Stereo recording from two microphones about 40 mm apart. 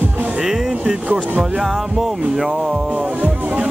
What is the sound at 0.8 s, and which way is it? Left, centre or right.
Speech, right.